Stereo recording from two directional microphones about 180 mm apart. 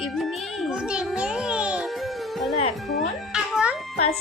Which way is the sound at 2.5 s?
35° left (ahead or behind).